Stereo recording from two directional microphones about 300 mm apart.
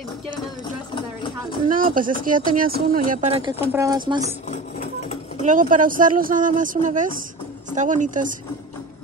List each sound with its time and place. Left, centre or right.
0.9 s a sound: centre
1.7 s speech: right
5.4 s speech: right